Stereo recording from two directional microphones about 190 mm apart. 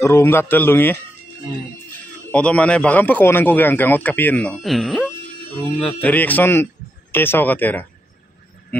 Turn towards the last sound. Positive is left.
turn(degrees=10)  # may be behind; listen again after turning